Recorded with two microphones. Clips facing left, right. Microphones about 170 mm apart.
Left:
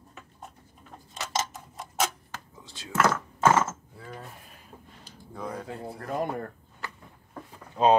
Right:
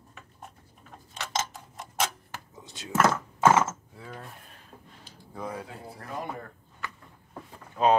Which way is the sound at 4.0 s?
5° left (ahead or behind).